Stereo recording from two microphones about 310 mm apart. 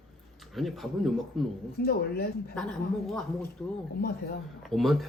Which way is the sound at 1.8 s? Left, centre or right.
Left.